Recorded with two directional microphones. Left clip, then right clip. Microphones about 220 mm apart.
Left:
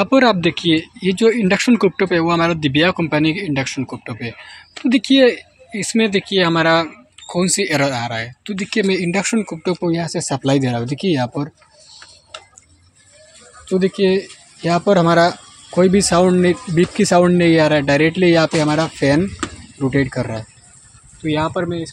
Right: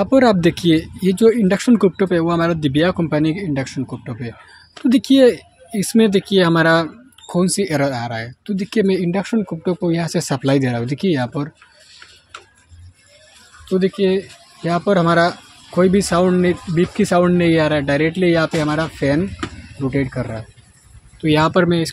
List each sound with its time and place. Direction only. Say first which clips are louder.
0.0 s speech: even; 15° right (ahead or behind)
4.8 s speech: even; 20° right (ahead or behind); by 12.0 s centre (ahead or behind)
13.7 s speech: left 1 dB; 5° left (ahead or behind)
21.2 s speech: right 5 dB; 20° right (ahead or behind)